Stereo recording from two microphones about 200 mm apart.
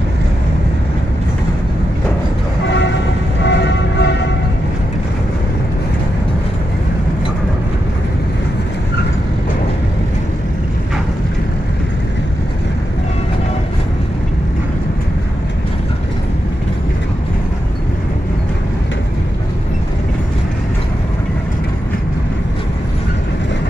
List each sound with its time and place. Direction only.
3.4 s music: 60° left (ahead or behind)